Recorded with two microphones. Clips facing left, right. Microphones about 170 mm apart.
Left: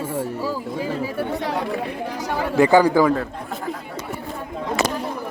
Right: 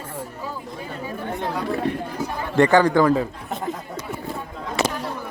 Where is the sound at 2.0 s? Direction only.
90° left.